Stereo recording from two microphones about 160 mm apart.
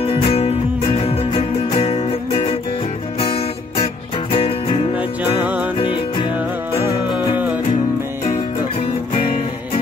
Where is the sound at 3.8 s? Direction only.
35° left (ahead or behind).